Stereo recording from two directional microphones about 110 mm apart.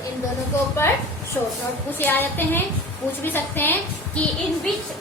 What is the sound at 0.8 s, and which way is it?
Speech, 20° left (ahead or behind).